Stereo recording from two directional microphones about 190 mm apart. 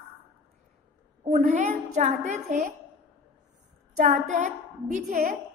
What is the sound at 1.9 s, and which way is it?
Speech, 40° right (ahead or behind).